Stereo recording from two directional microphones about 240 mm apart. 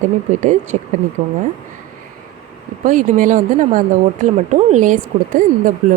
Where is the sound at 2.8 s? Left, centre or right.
Right.